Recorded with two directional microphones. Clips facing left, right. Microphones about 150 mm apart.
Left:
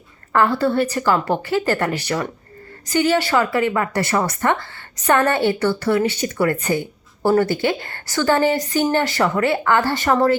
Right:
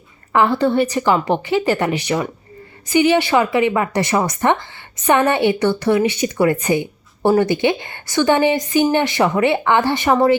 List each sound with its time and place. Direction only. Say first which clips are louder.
0.3 s a woman's voice: right 2 dB; 15° right (ahead or behind)